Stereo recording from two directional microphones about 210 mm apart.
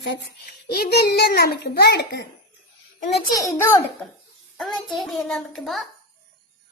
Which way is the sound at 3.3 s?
15° left (ahead or behind).